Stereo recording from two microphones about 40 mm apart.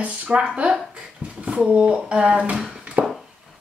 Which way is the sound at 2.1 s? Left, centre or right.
Right.